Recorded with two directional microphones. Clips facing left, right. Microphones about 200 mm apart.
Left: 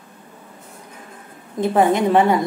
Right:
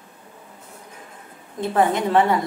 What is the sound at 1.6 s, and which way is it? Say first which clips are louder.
Speech: left 4 dB; 15° left (ahead or behind).